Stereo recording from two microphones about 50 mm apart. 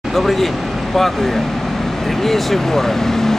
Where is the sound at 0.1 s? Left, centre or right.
Centre.